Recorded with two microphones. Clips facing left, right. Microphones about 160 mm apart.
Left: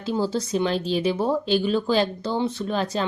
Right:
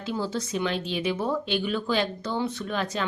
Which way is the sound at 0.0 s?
35° left (ahead or behind).